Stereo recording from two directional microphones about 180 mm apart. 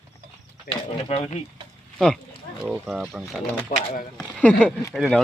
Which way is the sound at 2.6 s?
5° right (ahead or behind).